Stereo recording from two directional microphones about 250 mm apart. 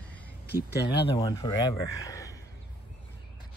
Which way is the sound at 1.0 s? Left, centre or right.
Centre.